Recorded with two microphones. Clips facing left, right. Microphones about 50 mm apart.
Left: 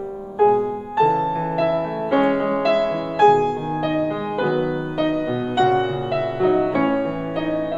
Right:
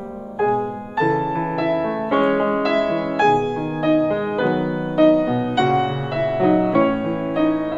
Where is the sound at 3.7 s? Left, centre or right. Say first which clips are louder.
Right 7 dB; centre.